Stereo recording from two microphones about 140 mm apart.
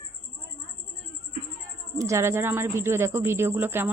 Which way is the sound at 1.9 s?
20° right (ahead or behind).